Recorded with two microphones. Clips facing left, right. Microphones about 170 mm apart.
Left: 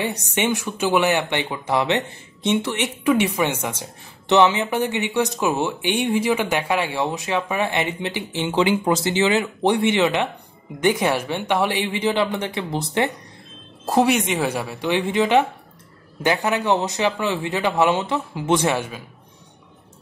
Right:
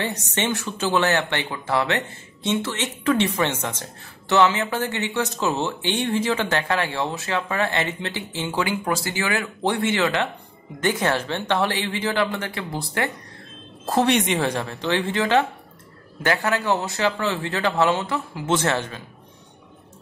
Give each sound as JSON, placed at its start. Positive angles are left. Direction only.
{"t": 0.0, "sound": "speech", "side_deg": 10}
{"t": 14.1, "sound": "speech", "side_deg": 0}